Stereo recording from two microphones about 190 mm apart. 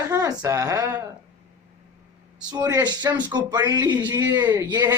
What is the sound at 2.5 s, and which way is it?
A man's voice, 20° right (ahead or behind).